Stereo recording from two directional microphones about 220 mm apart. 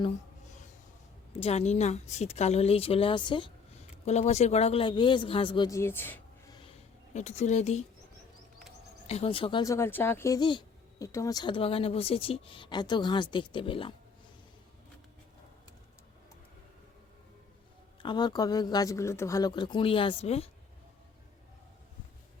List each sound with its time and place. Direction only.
1.3 s speech: 25° left (ahead or behind); by 6.6 s 10° left (ahead or behind)
7.1 s speech: 30° left (ahead or behind)
9.0 s speech: 25° left (ahead or behind)
18.0 s speech: 20° left (ahead or behind)